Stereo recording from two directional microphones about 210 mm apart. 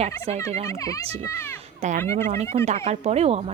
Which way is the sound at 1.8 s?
35° right (ahead or behind).